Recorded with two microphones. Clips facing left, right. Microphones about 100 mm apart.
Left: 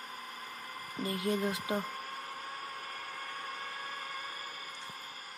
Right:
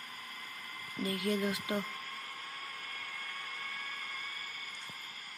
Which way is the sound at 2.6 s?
25° left (ahead or behind).